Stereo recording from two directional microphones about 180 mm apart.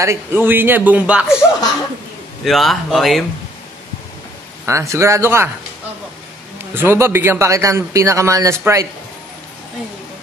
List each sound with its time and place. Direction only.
0.0 s a man's voice: 15° right (ahead or behind)
2.4 s speech: centre (ahead or behind)
4.6 s a man's voice: 15° right (ahead or behind)
6.7 s a man's voice: 10° right (ahead or behind)